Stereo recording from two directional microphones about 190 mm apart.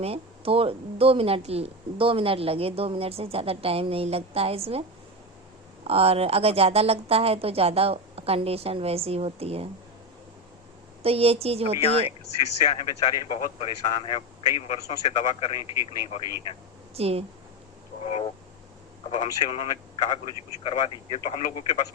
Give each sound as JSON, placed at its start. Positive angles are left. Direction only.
{"t": 0.0, "sound": "a woman's voice", "side_deg": -30}
{"t": 5.8, "sound": "a woman's voice", "side_deg": -30}
{"t": 11.0, "sound": "a woman's voice", "side_deg": -30}
{"t": 12.6, "sound": "a man's voice", "side_deg": 25}
{"t": 16.9, "sound": "a woman's voice", "side_deg": -30}
{"t": 18.0, "sound": "vehicle", "side_deg": 30}
{"t": 19.1, "sound": "a man's voice", "side_deg": 35}